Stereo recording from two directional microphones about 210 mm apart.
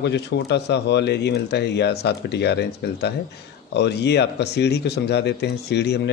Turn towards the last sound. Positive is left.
turn(degrees=55)  # may be behind; listen again after turning